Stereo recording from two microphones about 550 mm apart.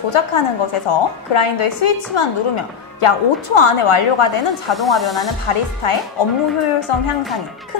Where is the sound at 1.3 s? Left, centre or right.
Left.